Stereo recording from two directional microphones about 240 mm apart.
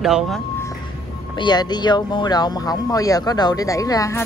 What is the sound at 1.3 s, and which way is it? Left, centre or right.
Speech, centre.